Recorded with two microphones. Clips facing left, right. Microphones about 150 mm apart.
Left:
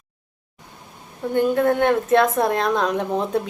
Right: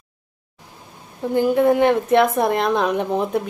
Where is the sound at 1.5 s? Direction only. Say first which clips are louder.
Right 3 dB; 5° right (ahead or behind).